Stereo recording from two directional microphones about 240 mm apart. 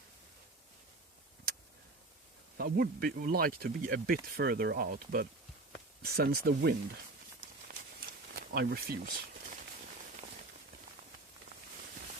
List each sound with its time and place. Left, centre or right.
2.6 s speech: right
8.3 s speech: right